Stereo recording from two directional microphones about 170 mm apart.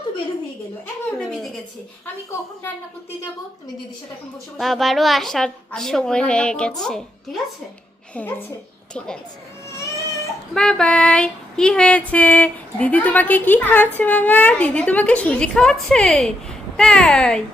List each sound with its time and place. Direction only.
1.2 s a sound: centre (ahead or behind)
4.5 s a woman's voice: centre (ahead or behind)
8.1 s female singing: 10° left (ahead or behind)
8.9 s a woman's voice: 5° left (ahead or behind)
10.5 s female singing: 5° left (ahead or behind)